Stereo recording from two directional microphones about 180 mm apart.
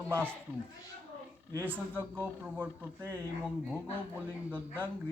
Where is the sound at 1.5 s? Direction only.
10° right (ahead or behind).